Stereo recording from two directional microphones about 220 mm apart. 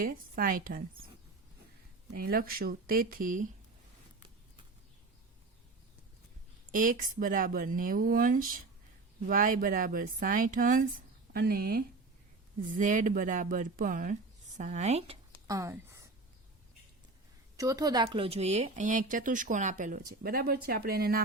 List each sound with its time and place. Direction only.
0.0 s speech: 40° right (ahead or behind)
2.1 s speech: 40° right (ahead or behind)
6.7 s speech: 35° right (ahead or behind)
15.5 s speech: 15° right (ahead or behind)
17.6 s speech: 15° right (ahead or behind); by 21.2 s 45° right (ahead or behind)